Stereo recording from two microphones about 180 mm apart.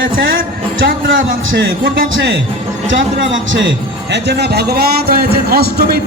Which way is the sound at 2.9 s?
90° right.